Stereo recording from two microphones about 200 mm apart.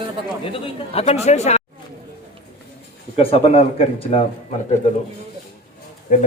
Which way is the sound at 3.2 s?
30° left (ahead or behind).